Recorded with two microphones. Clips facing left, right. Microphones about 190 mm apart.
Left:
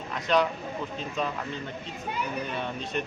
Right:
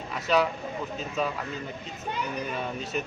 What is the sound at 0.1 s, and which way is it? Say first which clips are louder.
A man's voice: even; 5° right (ahead or behind).